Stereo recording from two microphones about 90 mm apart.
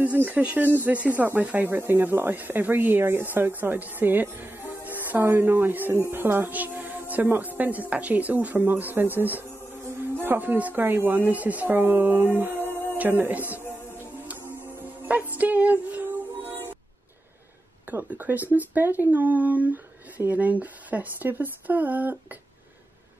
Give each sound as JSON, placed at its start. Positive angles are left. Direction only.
{"t": 0.0, "sound": "speech", "side_deg": -15}
{"t": 14.2, "sound": "music", "side_deg": -20}
{"t": 17.8, "sound": "speech", "side_deg": -20}